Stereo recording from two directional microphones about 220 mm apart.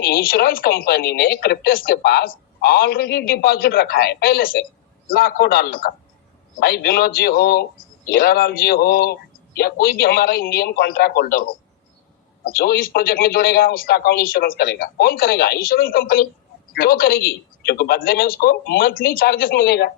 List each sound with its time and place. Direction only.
0.0 s a man's voice: 40° left (ahead or behind)
12.5 s a man's voice: 45° left (ahead or behind)